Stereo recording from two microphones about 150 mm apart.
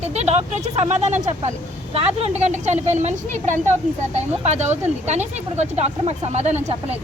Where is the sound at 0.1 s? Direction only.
45° right (ahead or behind).